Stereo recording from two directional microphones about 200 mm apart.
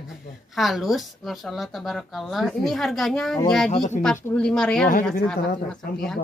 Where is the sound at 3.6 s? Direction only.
35° left (ahead or behind).